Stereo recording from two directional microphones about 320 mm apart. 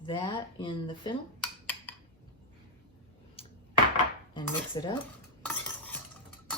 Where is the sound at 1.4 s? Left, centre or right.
Centre.